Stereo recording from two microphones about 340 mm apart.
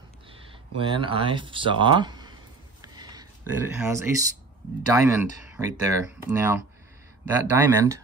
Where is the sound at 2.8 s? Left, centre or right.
Centre.